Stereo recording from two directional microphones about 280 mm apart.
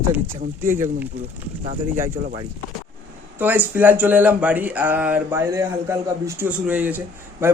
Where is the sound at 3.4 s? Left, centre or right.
Centre.